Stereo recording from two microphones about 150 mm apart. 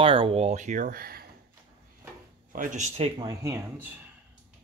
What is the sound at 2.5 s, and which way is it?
Speech, 60° right (ahead or behind).